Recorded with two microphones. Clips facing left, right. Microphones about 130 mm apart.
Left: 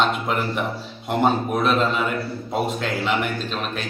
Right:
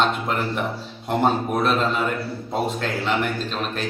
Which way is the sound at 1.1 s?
5° left (ahead or behind).